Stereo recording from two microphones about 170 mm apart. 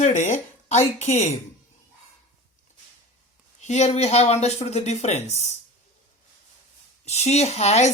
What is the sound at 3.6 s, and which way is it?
Speech, 40° left (ahead or behind).